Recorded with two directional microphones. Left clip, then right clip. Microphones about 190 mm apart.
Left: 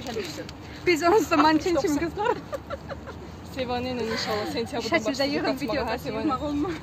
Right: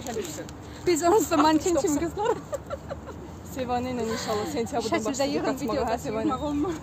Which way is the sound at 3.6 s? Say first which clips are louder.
Even; 50° right (ahead or behind).